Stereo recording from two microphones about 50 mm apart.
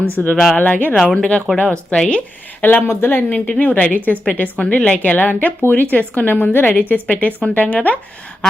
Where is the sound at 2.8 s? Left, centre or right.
Left.